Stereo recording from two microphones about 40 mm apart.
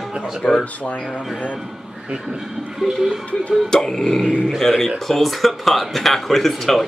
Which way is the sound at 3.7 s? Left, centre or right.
Centre.